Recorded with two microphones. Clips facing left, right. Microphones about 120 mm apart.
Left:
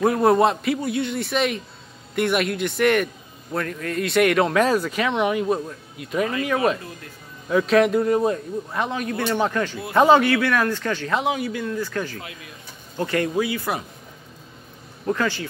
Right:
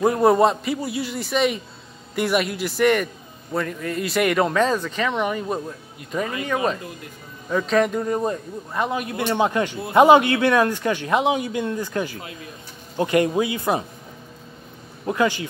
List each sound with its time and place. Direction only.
0.0 s speech: centre (ahead or behind); by 13.8 s 25° right (ahead or behind)
15.0 s speech: 15° right (ahead or behind)